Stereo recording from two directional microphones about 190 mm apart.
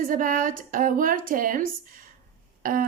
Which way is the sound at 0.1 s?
45° right (ahead or behind).